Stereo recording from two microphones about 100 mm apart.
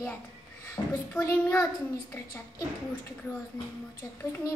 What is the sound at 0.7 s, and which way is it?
Speech, 25° left (ahead or behind).